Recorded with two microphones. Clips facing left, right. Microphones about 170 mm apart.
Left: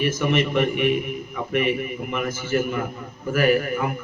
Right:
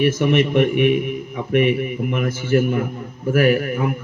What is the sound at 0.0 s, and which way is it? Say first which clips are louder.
A man's voice: right 5 dB; 55° right (ahead or behind).